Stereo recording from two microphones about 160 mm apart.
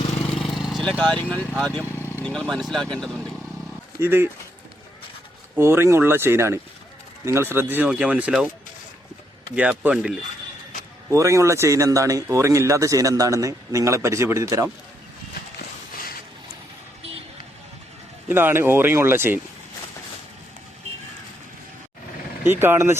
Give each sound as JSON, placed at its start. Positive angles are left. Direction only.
{"t": 0.3, "sound": "vehicle", "side_deg": 0}
{"t": 0.9, "sound": "speech", "side_deg": 10}
{"t": 4.0, "sound": "speech", "side_deg": -15}
{"t": 5.5, "sound": "speech", "side_deg": -15}
{"t": 9.6, "sound": "speech", "side_deg": -10}
{"t": 11.1, "sound": "speech", "side_deg": -20}
{"t": 18.3, "sound": "speech", "side_deg": -15}
{"t": 22.4, "sound": "speech", "side_deg": -15}